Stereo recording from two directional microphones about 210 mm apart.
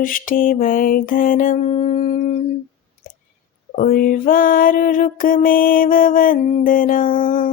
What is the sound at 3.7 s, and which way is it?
Music, 40° left (ahead or behind).